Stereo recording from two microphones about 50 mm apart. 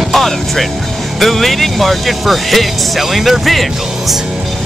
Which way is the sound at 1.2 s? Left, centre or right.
Centre.